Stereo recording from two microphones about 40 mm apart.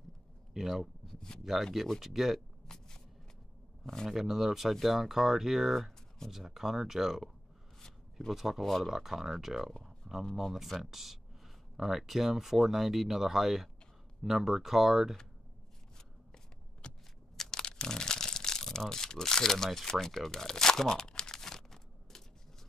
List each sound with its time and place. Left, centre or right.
0.5 s a sound: centre
1.6 s speech: centre
2.6 s shuffling cards: centre
3.8 s speech: centre
4.1 s speech: centre
8.3 s speech: centre
8.6 s speech: centre
8.9 s speech: centre
9.8 s a sound: centre
10.3 s speech: centre
16.8 s a sound: left
17.4 s crumpling: centre
18.9 s speech: centre
20.2 s crumpling: centre